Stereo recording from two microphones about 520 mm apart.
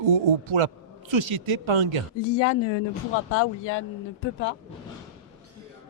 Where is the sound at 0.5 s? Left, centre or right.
Right.